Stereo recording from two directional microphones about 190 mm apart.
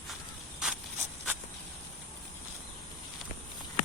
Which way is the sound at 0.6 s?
5° right (ahead or behind).